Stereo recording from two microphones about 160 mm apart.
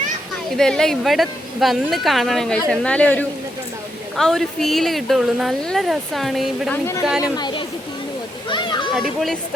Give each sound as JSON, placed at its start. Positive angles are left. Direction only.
{"t": 0.5, "sound": "speech", "side_deg": 5}
{"t": 7.2, "sound": "speech", "side_deg": 25}
{"t": 8.4, "sound": "a sound", "side_deg": 30}
{"t": 9.0, "sound": "speech", "side_deg": 0}